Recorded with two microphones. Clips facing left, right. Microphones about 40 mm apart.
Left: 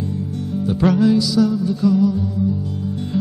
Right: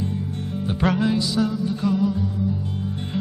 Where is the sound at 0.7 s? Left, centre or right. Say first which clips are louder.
Left 6 dB; right.